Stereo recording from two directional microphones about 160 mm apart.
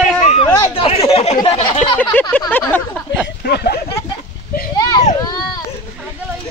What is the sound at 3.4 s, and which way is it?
Speech, 85° left.